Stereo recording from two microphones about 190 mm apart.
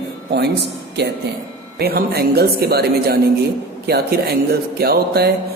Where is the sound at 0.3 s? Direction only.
60° right (ahead or behind).